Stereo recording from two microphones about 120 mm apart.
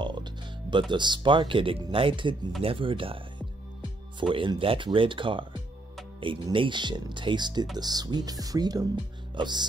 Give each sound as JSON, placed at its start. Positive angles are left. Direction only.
{"t": 0.0, "sound": "speech", "side_deg": -40}
{"t": 6.5, "sound": "speech", "side_deg": -40}